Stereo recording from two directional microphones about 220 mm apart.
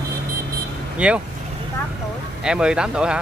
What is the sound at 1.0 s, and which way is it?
Speech, 5° right (ahead or behind).